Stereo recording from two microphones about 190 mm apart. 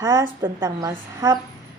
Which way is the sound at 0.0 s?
15° right (ahead or behind).